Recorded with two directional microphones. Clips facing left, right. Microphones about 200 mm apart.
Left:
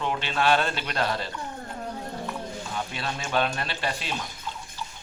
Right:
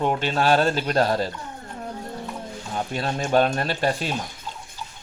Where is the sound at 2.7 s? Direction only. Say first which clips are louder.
Right 8 dB; 45° right (ahead or behind).